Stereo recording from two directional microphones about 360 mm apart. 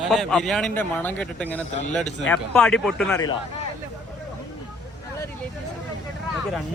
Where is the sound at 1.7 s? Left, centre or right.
Centre.